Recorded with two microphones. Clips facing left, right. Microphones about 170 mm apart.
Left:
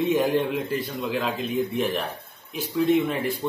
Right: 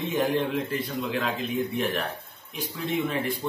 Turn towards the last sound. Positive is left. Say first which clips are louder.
# left 5 dB
turn(degrees=0)  # may be behind; listen again after turning